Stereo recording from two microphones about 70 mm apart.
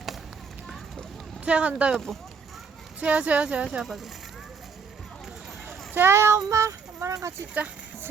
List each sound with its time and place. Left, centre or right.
1.5 s speech: centre
1.9 s speech: centre
3.0 s speech: centre
5.6 s a sound: right